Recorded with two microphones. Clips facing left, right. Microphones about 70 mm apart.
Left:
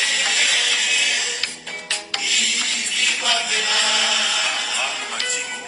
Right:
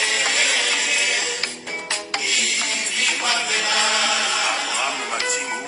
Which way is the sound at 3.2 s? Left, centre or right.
Right.